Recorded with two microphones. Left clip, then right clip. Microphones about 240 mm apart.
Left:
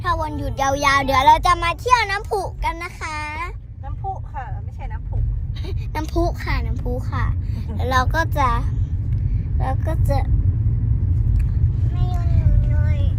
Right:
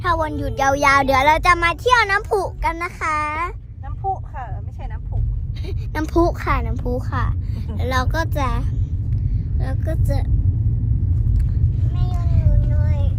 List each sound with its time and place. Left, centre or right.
0.0 s speech: centre
1.8 s a child's voice: centre
2.1 s speech: centre
2.6 s a child's voice: centre
5.6 s a woman's voice: centre
6.4 s a child's voice: centre
6.9 s speech: centre
12.0 s a sound: centre
12.6 s child singing: centre